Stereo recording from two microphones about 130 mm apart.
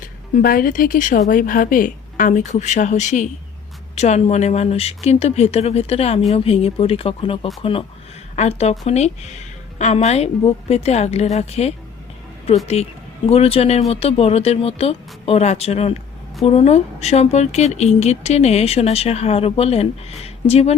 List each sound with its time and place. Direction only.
0.0 s a woman's voice: 90° left; by 20.7 s 55° left (ahead or behind)